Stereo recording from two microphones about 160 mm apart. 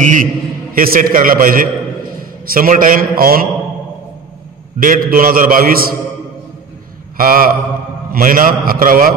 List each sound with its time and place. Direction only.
0.0 s a man's voice: 50° right (ahead or behind)
0.7 s a man's voice: 65° right (ahead or behind)
4.7 s a man's voice: 60° right (ahead or behind)
7.2 s a man's voice: 65° right (ahead or behind)